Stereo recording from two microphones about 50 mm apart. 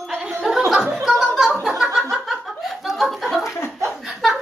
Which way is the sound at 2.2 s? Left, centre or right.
Centre.